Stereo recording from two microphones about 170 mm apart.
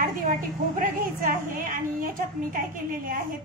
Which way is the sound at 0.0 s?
50° right (ahead or behind).